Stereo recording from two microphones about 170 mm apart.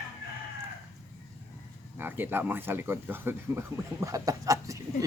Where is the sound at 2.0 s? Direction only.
10° right (ahead or behind).